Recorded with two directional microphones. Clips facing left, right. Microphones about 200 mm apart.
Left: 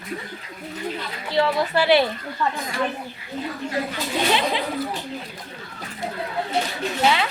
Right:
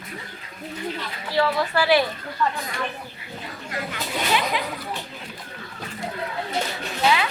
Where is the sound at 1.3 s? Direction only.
20° left (ahead or behind).